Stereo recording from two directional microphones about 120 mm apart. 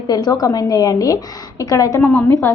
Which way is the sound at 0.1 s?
35° left (ahead or behind).